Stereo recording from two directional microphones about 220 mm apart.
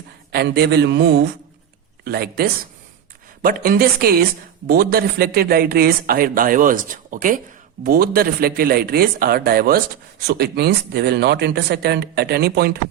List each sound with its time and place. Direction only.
0.3 s speech: 50° right (ahead or behind)